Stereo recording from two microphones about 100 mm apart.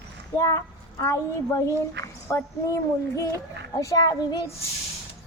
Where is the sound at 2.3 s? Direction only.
30° left (ahead or behind).